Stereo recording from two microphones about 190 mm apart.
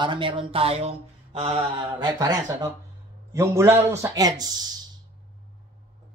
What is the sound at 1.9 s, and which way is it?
A man's voice, 20° right (ahead or behind).